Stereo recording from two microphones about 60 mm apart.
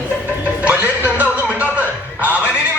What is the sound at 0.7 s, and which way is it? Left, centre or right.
Music, right.